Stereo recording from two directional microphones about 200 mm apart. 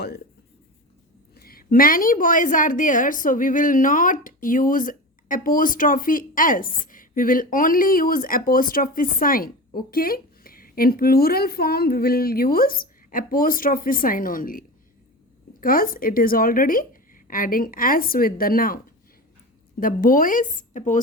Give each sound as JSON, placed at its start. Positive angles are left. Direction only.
{"t": 1.4, "sound": "a woman's voice", "side_deg": 50}
{"t": 15.6, "sound": "a woman's voice", "side_deg": 45}
{"t": 19.8, "sound": "a woman's voice", "side_deg": 45}